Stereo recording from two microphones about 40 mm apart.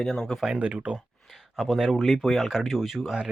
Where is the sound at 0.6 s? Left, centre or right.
Right.